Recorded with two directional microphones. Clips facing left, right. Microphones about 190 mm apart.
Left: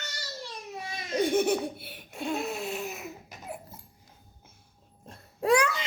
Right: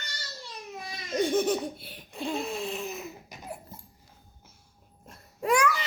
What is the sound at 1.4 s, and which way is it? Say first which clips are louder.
Laughter: left 1 dB; 65° left (ahead or behind).